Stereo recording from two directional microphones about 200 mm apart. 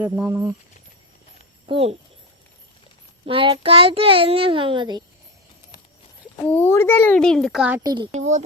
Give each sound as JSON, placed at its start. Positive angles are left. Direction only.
{"t": 0.0, "sound": "speech", "side_deg": -15}
{"t": 1.6, "sound": "speech", "side_deg": -30}
{"t": 3.2, "sound": "a child's voice", "side_deg": -25}
{"t": 6.4, "sound": "a child's voice", "side_deg": 10}
{"t": 7.9, "sound": "a child's voice", "side_deg": -25}
{"t": 8.1, "sound": "speech", "side_deg": -35}